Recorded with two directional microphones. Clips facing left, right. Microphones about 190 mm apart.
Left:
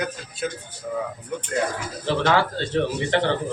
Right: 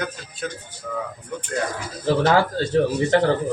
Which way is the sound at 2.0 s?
40° right (ahead or behind).